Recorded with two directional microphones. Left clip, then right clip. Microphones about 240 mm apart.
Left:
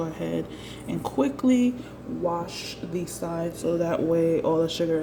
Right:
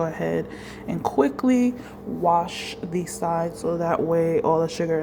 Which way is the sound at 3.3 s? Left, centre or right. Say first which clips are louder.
Left 1 dB; centre.